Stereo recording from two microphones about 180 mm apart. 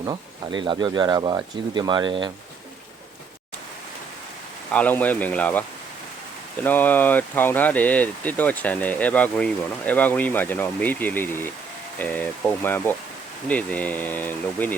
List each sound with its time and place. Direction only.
0.0 s speech: 25° right (ahead or behind)
4.7 s speech: 10° left (ahead or behind)
6.7 s speech: 10° left (ahead or behind)